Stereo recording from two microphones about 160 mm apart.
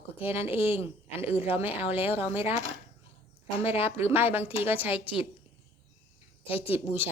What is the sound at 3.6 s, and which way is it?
Speech, 15° right (ahead or behind).